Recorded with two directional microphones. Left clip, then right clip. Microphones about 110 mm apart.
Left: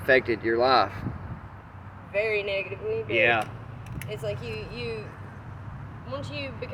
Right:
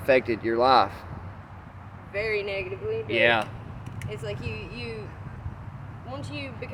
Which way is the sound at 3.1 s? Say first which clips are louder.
Right 1 dB; 50° right (ahead or behind).